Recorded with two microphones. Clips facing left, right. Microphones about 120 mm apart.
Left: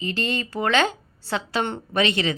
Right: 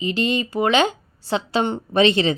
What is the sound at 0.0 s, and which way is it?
Speech, 15° right (ahead or behind).